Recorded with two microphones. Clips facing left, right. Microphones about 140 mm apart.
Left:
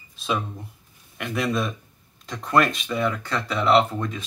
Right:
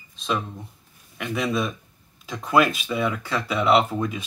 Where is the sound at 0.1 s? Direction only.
5° left (ahead or behind).